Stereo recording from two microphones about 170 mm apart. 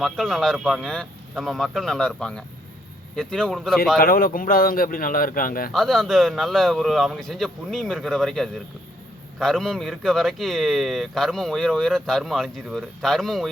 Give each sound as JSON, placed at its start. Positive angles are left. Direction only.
{"t": 0.0, "sound": "speech", "side_deg": 0}
{"t": 3.9, "sound": "speech", "side_deg": 60}
{"t": 5.7, "sound": "speech", "side_deg": 0}